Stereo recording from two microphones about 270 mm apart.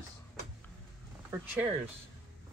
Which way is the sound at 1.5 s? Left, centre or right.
Centre.